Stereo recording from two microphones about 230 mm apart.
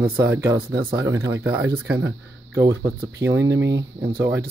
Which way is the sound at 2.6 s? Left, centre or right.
Centre.